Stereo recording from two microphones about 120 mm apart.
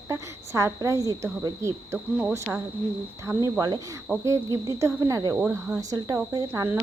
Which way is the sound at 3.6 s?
35° right (ahead or behind).